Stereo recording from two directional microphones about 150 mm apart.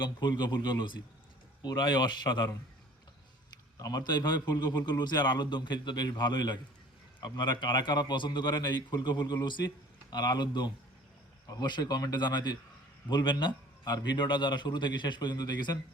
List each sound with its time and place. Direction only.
0.0 s a man's voice: 30° left (ahead or behind)
3.8 s a man's voice: 25° left (ahead or behind)